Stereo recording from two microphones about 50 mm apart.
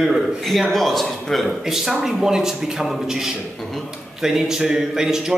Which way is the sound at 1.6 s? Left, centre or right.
Centre.